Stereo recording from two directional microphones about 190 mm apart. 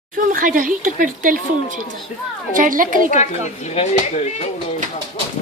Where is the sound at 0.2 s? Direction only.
45° right (ahead or behind).